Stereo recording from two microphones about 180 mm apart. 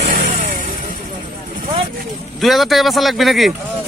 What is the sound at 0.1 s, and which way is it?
Vehicle, 45° right (ahead or behind).